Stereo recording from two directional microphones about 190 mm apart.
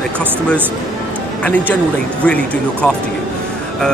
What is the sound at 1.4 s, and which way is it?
Speech, 5° left (ahead or behind).